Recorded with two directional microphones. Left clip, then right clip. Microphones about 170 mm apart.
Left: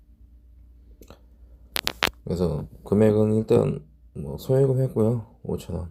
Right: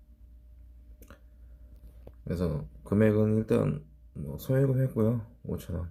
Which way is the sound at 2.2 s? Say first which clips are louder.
Left 7 dB; 20° left (ahead or behind).